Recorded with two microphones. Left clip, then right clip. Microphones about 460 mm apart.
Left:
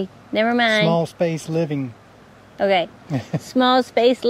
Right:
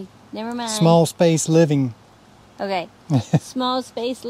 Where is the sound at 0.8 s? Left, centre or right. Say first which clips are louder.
Right 3 dB; right.